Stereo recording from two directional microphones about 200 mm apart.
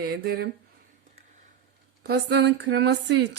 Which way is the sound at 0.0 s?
50° right (ahead or behind).